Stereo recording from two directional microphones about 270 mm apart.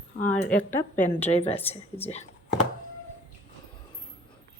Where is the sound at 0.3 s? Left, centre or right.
Centre.